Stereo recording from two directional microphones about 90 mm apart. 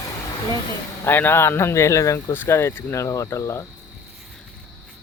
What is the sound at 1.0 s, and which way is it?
Speech, 25° left (ahead or behind).